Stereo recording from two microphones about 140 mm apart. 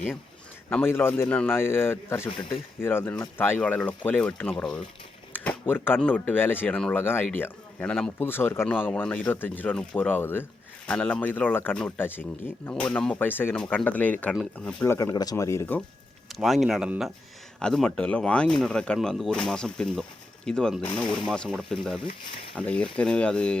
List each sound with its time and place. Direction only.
0.8 s speech: 15° left (ahead or behind)
14.9 s speech: 30° left (ahead or behind)
16.3 s speech: centre (ahead or behind)